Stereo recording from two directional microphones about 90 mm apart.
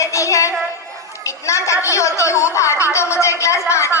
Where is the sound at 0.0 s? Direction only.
35° left (ahead or behind).